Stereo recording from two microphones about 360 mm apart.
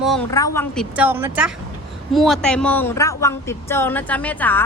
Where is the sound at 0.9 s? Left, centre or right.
Centre.